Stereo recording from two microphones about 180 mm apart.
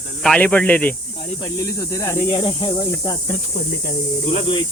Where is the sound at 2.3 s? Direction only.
30° left (ahead or behind).